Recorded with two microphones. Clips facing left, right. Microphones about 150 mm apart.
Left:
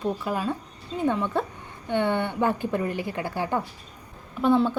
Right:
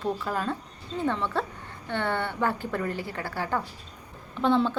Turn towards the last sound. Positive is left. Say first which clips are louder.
# left 2 dB
turn(degrees=10)  # may be behind; listen again after turning